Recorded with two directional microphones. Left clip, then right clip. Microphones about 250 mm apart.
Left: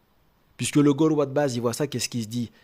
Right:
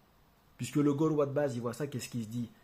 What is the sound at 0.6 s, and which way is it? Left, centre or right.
Speech, left.